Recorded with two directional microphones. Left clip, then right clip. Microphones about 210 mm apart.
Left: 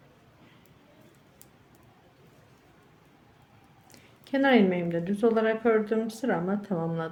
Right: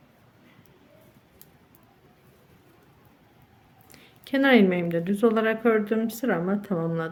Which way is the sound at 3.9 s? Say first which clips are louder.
Right 3 dB; 15° right (ahead or behind).